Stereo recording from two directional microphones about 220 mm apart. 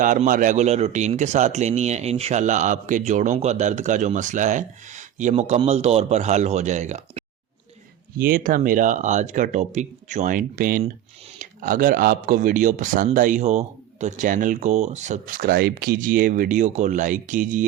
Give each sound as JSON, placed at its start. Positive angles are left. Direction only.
{"t": 0.0, "sound": "speech", "side_deg": -35}
{"t": 8.2, "sound": "speech", "side_deg": -40}